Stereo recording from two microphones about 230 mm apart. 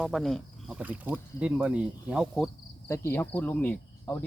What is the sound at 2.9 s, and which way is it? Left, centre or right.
Speech, centre.